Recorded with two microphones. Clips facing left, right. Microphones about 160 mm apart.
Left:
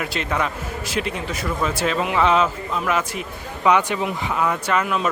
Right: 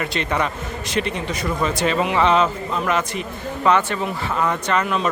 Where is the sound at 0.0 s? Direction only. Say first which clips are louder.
Right 1 dB; 5° left (ahead or behind).